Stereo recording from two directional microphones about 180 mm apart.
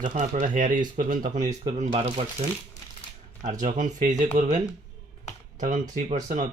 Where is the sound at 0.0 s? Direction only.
45° right (ahead or behind).